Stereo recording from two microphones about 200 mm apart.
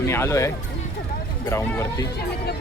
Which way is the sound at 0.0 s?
15° left (ahead or behind).